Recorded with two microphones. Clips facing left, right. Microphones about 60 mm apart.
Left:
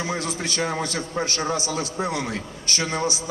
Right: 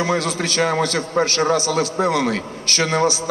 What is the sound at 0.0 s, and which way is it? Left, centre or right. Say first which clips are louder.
A man's voice: right 7 dB; right.